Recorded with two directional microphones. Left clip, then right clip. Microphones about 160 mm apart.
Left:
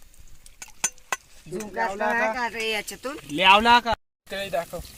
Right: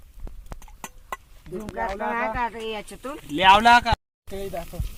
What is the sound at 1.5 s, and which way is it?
Speech, 90° left.